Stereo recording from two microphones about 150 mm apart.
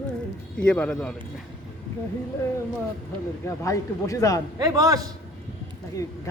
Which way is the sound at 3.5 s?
20° left (ahead or behind).